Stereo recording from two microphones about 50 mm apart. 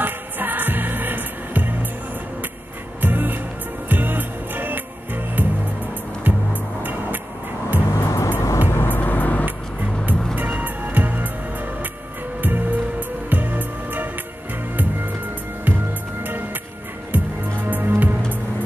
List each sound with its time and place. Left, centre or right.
0.0 s music: right
3.0 s music: right
7.9 s music: left
8.4 s music: left
8.8 s vehicle: left
10.3 s music: right
12.4 s music: right
15.6 s music: right